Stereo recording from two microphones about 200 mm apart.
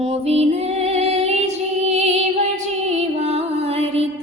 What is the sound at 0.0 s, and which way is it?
Music, 30° right (ahead or behind).